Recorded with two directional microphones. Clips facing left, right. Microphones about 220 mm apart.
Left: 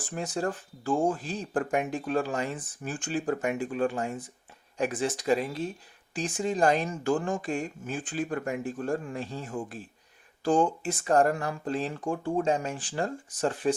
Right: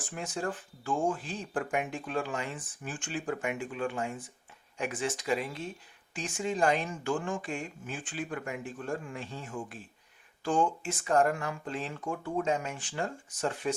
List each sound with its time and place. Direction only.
0.0 s speech: 35° left (ahead or behind)